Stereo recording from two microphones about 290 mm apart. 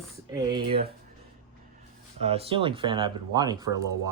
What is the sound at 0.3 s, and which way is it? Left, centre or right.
Speech, centre.